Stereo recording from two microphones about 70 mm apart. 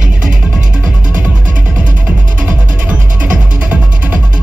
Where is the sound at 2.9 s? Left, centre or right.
Right.